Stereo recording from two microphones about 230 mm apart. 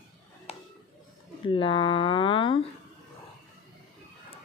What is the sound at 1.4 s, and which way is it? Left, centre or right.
Speech, left.